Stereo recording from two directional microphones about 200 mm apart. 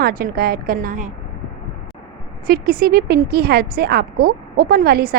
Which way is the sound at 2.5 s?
50° right (ahead or behind).